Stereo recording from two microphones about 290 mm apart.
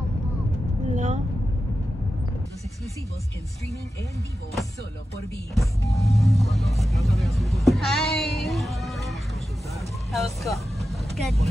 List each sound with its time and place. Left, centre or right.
0.9 s vehicle: right
5.5 s speech: centre
9.8 s vehicle: centre